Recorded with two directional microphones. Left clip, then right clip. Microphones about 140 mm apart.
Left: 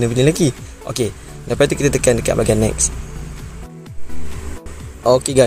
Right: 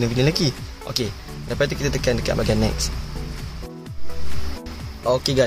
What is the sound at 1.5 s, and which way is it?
Speech, 45° left (ahead or behind).